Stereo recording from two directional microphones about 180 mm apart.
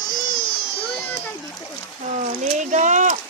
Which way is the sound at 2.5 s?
40° right (ahead or behind).